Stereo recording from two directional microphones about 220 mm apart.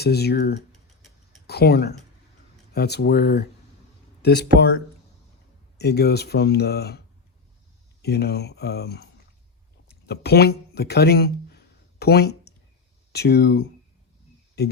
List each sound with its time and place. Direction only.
0.0 s speech: 45° left (ahead or behind)
0.7 s tick-tock: centre (ahead or behind)
1.5 s speech: 45° left (ahead or behind)
5.7 s speech: 50° left (ahead or behind)
8.0 s speech: 45° left (ahead or behind)